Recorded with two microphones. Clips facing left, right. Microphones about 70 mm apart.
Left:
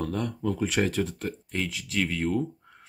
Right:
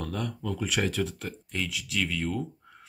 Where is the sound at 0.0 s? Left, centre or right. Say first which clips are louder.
Left 4 dB; left.